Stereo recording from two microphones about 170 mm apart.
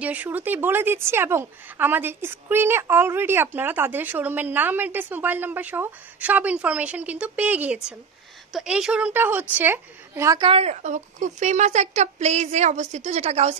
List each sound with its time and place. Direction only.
0.0 s a woman's voice: 10° right (ahead or behind)
10.4 s a woman's voice: 35° right (ahead or behind)